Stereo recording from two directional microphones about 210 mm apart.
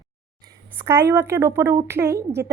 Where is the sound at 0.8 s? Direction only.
10° right (ahead or behind).